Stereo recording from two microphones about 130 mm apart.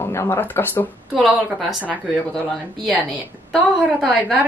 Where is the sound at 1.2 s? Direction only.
Centre (ahead or behind).